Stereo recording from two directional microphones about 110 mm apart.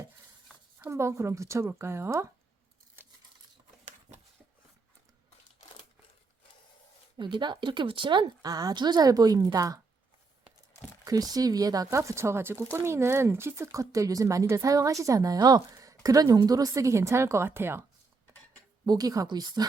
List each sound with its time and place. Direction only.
0.9 s speech: 25° right (ahead or behind)
3.0 s a sound: 20° right (ahead or behind)
7.2 s a woman's voice: 45° right (ahead or behind)
11.0 s a woman's voice: 35° right (ahead or behind)
18.9 s a woman's voice: 35° right (ahead or behind)